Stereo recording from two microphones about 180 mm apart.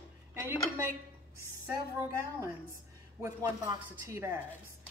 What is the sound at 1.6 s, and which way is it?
A woman's voice, 15° right (ahead or behind).